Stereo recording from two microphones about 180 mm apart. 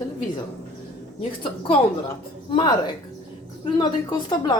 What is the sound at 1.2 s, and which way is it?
A woman's voice, 30° left (ahead or behind).